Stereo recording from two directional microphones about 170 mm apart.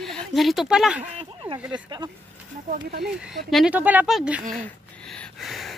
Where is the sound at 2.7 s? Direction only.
60° right (ahead or behind).